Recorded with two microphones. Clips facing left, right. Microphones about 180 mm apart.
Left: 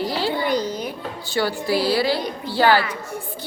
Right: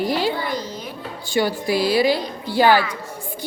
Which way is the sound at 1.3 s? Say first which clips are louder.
Right 1 dB; 15° right (ahead or behind).